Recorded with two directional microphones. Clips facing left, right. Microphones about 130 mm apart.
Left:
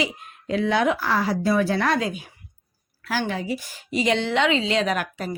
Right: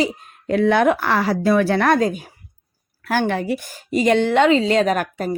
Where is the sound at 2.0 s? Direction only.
45° right (ahead or behind).